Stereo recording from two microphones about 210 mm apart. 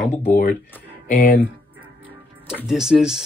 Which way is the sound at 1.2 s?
40° left (ahead or behind).